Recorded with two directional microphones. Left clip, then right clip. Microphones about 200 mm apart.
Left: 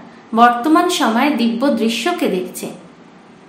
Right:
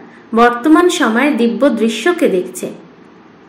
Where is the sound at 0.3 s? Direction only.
10° right (ahead or behind).